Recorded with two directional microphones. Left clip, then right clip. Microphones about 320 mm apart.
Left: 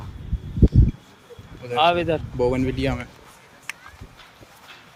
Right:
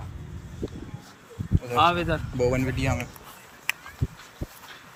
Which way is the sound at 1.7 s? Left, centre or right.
Centre.